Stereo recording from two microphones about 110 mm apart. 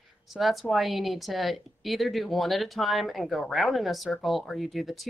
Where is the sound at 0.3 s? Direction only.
Centre (ahead or behind).